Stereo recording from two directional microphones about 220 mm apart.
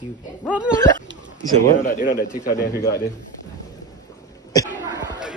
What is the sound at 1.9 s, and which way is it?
Speech, 40° left (ahead or behind).